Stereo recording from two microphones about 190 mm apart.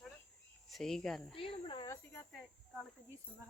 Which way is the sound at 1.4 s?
25° left (ahead or behind).